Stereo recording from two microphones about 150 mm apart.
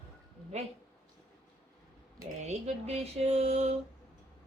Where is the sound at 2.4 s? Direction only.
45° right (ahead or behind).